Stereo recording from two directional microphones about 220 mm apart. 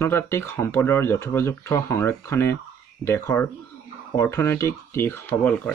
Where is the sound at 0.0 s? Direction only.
10° left (ahead or behind).